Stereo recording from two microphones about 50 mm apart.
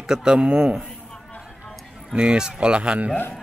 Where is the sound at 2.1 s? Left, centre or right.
Centre.